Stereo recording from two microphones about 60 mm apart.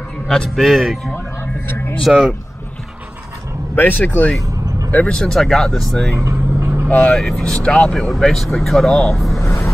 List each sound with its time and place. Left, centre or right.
0.3 s speech: centre
1.1 s a sound: left
2.0 s speech: centre
3.7 s speech: left
4.4 s vehicle: right
5.1 s speech: centre
6.1 s vehicle: right
7.2 s speech: centre
7.6 s speech: centre
7.9 s speech: centre
8.8 s speech: centre
9.1 s speech: centre
9.4 s a sound: left